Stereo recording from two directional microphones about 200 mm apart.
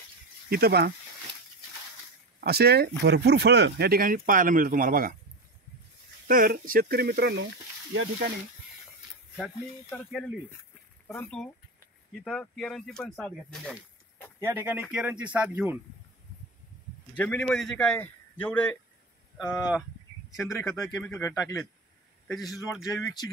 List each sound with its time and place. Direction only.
0.5 s speech: 50° right (ahead or behind)
2.4 s speech: 55° right (ahead or behind)
6.2 s speech: 45° right (ahead or behind)
9.8 s a man's voice: 10° left (ahead or behind)
14.4 s speech: 10° right (ahead or behind)
17.1 s a man's voice: 5° left (ahead or behind)
20.4 s a man's voice: 15° left (ahead or behind)